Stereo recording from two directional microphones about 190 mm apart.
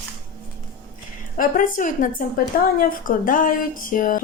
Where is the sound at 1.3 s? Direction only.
45° left (ahead or behind).